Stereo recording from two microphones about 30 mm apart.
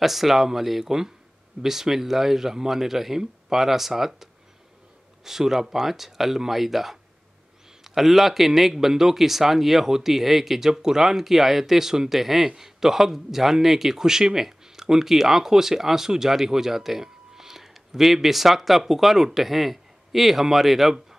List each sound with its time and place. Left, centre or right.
0.0 s a man's voice: centre
10.7 s speech: right
11.0 s a man's voice: centre
14.0 s speech: centre